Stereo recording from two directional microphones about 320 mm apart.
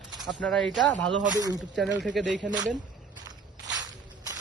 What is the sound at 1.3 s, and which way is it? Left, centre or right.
Speech, centre.